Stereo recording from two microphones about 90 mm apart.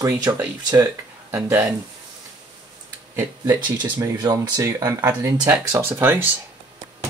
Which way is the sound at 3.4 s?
55° right (ahead or behind).